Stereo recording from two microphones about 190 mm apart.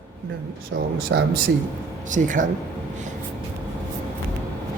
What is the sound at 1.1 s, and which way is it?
Speech, 75° right (ahead or behind).